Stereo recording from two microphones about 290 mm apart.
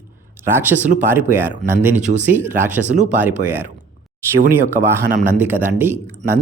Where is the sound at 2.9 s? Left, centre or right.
Right.